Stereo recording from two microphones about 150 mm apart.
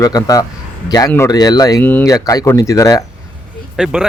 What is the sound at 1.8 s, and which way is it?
Speech, 10° left (ahead or behind).